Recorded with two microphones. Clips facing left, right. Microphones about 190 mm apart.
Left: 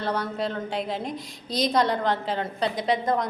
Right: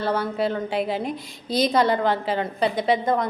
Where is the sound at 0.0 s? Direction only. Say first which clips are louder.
Right 4 dB; 5° right (ahead or behind).